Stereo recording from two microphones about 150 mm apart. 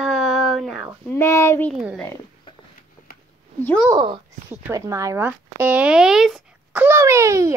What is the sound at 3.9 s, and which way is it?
Speech, 30° right (ahead or behind).